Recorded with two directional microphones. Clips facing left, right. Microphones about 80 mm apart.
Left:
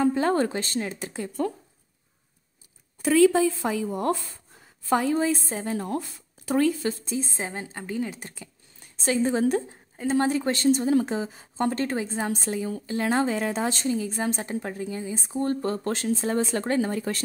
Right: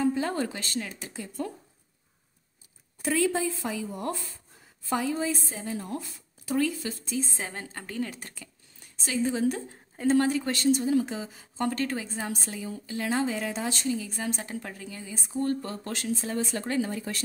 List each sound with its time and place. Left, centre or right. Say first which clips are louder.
0.0 s a sound: left 5 dB; left
0.5 s a woman's voice: left 5 dB; left
3.2 s a woman's voice: left 9 dB; left
3.7 s a woman's voice: left 7 dB; left
7.1 s a woman's voice: left 2 dB; left
9.0 s a woman's voice: left 4 dB; left
10.1 s a woman's voice: left 3 dB; left
15.6 s a woman's voice: left 7 dB; left